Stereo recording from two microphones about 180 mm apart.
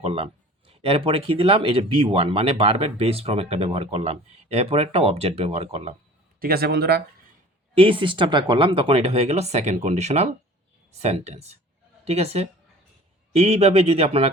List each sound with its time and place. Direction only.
0.0 s speech: 35° right (ahead or behind)
6.4 s speech: 60° right (ahead or behind)
7.8 s speech: 30° right (ahead or behind)